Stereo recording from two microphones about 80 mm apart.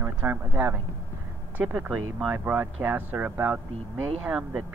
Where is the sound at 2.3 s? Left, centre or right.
Right.